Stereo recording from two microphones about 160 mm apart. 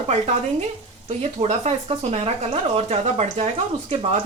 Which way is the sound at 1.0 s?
40° right (ahead or behind).